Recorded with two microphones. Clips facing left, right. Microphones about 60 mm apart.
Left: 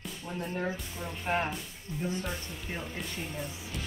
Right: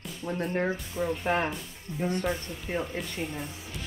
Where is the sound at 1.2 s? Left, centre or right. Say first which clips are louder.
Right 3 dB; right.